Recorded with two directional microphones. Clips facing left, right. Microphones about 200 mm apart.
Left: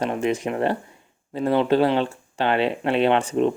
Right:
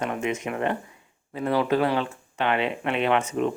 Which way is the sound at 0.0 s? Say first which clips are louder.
Left 4 dB; 35° left (ahead or behind).